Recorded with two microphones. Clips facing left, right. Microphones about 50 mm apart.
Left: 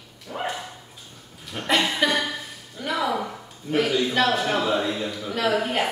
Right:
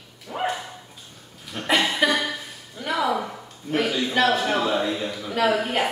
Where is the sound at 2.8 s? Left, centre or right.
Centre.